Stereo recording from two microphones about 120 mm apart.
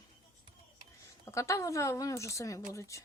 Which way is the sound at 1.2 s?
25° left (ahead or behind).